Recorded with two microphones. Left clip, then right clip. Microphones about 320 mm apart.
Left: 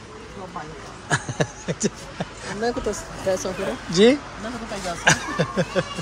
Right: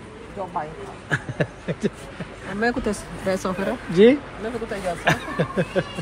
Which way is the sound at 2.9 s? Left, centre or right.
Right.